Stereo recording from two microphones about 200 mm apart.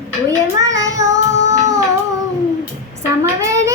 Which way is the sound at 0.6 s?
15° right (ahead or behind).